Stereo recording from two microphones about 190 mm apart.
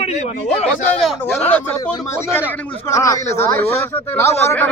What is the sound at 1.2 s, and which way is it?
A man's voice, 10° left (ahead or behind).